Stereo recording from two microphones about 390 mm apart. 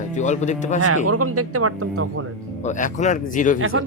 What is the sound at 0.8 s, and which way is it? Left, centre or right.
Speech, right.